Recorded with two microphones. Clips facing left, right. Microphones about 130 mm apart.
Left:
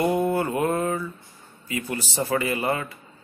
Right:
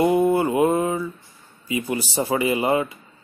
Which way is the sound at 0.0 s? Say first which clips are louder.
Right 4 dB; 15° right (ahead or behind).